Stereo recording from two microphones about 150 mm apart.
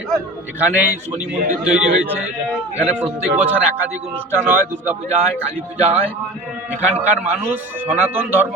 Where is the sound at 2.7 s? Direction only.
10° right (ahead or behind).